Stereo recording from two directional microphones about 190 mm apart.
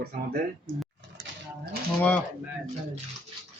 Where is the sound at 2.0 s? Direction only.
10° left (ahead or behind).